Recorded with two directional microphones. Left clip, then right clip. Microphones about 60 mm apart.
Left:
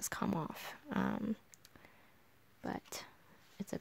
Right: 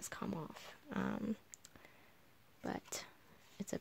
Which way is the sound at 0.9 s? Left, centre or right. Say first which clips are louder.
Left 4 dB; left.